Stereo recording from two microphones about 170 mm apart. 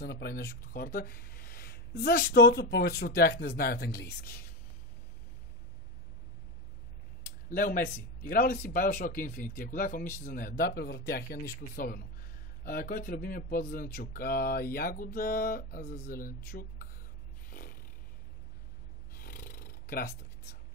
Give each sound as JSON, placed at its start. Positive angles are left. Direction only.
{"t": 0.0, "sound": "speech", "side_deg": 70}
{"t": 7.4, "sound": "speech", "side_deg": 55}
{"t": 17.5, "sound": "a sound", "side_deg": 55}
{"t": 19.1, "sound": "snoring", "side_deg": 60}